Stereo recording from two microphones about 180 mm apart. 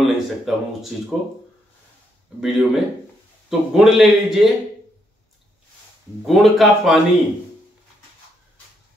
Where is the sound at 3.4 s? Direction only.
Centre (ahead or behind).